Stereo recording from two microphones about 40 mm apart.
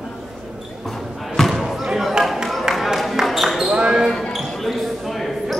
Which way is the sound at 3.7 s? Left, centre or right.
Right.